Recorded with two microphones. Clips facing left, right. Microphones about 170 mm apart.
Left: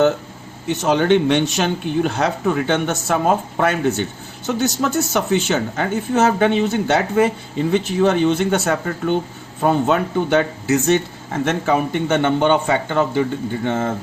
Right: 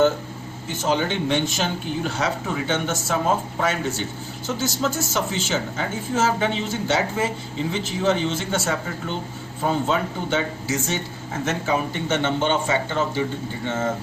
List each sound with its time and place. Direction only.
0.7 s speech: 65° left (ahead or behind)